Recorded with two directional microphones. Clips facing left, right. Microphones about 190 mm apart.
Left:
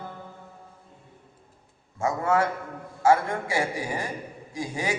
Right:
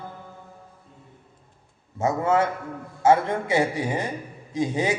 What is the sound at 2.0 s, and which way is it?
A man's voice, 20° right (ahead or behind).